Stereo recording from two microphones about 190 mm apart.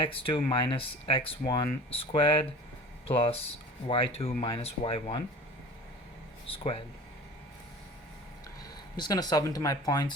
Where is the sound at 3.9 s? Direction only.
30° left (ahead or behind).